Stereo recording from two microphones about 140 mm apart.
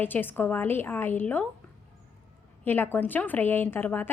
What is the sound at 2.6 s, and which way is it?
Speech, 15° left (ahead or behind).